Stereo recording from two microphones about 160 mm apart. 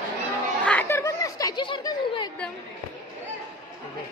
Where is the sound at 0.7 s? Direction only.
15° left (ahead or behind).